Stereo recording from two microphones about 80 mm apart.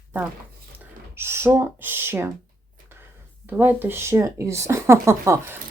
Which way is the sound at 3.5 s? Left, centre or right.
Right.